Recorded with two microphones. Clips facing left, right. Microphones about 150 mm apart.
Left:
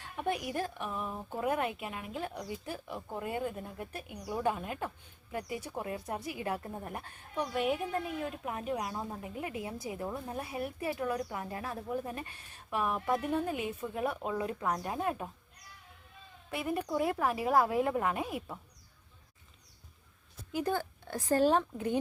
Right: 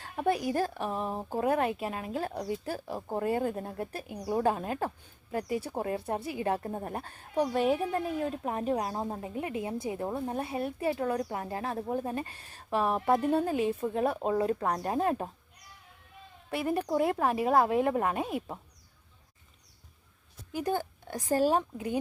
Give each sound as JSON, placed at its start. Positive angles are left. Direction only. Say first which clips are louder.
{"t": 0.0, "sound": "speech", "louder": "right 6 dB", "side_deg": -35}
{"t": 16.5, "sound": "speech", "louder": "right 4 dB", "side_deg": -35}
{"t": 20.7, "sound": "speech", "louder": "right 5 dB", "side_deg": -15}